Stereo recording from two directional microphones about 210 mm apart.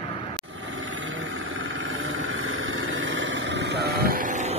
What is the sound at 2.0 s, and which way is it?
Vehicle, 75° right (ahead or behind).